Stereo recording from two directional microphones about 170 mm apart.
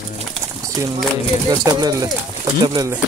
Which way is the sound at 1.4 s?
25° right (ahead or behind).